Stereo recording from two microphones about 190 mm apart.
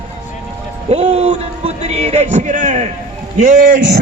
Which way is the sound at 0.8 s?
35° right (ahead or behind).